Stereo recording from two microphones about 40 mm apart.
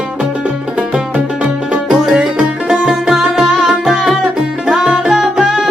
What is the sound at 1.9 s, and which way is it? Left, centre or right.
Music, centre.